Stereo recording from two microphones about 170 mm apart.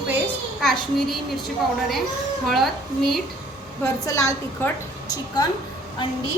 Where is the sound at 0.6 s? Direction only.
Centre (ahead or behind).